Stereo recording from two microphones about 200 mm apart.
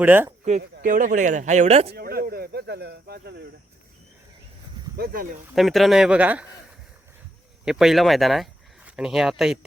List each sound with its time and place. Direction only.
0.0 s speech: 10° right (ahead or behind)
0.8 s speech: 40° right (ahead or behind)
1.9 s speech: 50° right (ahead or behind)
4.9 s speech: 50° right (ahead or behind)
5.5 s speech: centre (ahead or behind)
7.6 s speech: centre (ahead or behind)